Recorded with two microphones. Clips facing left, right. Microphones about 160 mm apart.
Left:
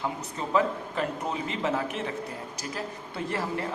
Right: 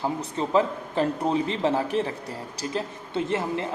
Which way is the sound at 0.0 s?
30° right (ahead or behind).